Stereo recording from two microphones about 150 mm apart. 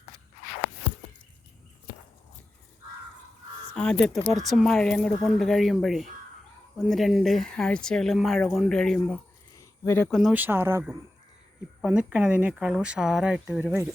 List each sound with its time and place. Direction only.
3.8 s speech: 5° left (ahead or behind)
9.6 s a sound: 15° left (ahead or behind)
10.1 s speech: centre (ahead or behind)
10.3 s speech: 15° right (ahead or behind)